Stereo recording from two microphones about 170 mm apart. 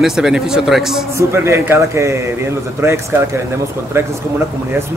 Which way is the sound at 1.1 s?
15° right (ahead or behind).